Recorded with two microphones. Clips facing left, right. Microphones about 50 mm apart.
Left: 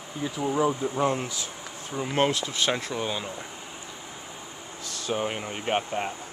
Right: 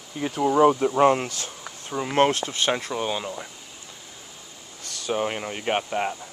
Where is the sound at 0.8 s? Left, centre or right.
Right.